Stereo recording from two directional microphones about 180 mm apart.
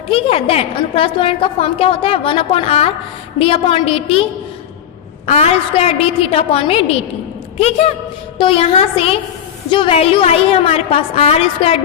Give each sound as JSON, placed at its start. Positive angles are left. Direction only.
{"t": 0.1, "sound": "a woman's voice", "side_deg": 35}
{"t": 5.2, "sound": "a woman's voice", "side_deg": 35}
{"t": 8.4, "sound": "a woman's voice", "side_deg": 30}